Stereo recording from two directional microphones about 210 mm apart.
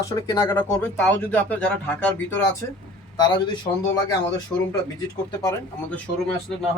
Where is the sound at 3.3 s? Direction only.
20° left (ahead or behind).